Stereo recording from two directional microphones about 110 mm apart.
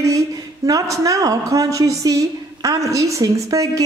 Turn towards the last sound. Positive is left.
turn(degrees=-30)  # may be behind; listen again after turning